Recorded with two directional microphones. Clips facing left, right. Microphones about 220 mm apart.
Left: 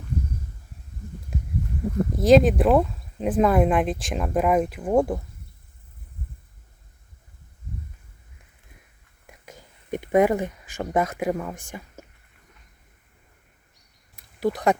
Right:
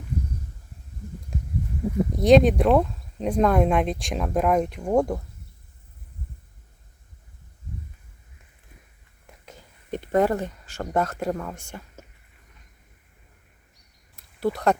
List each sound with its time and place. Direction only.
1.3 s a sound: 5° left (ahead or behind)
2.1 s speech: centre (ahead or behind)
9.2 s speech: 10° left (ahead or behind)
14.3 s speech: 15° left (ahead or behind)